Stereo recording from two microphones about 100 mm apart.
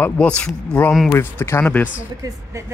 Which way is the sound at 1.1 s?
25° left (ahead or behind).